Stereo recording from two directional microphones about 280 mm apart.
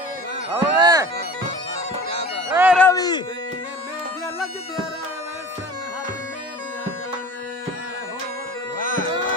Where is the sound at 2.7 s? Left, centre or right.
Centre.